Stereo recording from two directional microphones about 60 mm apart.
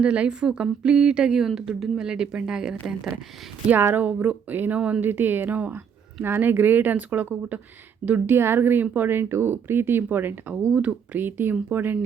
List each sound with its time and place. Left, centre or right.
0.0 s a woman's voice: centre
4.0 s speech: right
5.0 s speech: right
8.4 s speech: right
10.5 s speech: right